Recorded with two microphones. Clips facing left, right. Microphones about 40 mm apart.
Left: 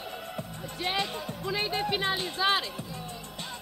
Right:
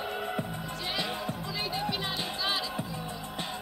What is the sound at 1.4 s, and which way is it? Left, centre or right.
Music, left.